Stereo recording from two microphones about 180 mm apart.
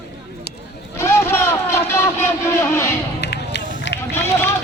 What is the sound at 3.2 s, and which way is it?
Run, 70° left (ahead or behind).